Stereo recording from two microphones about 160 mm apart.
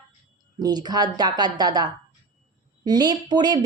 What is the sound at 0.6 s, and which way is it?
Speech, 25° right (ahead or behind).